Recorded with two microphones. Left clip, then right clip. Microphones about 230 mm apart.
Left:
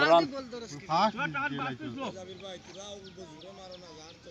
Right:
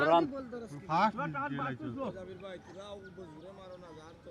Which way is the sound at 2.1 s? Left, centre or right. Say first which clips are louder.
Left 2 dB; left.